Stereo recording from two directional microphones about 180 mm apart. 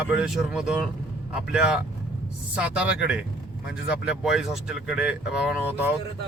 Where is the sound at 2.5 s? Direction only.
5° right (ahead or behind).